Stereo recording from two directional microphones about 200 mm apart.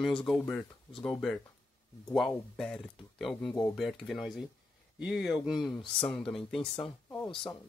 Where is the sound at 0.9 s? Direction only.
25° left (ahead or behind).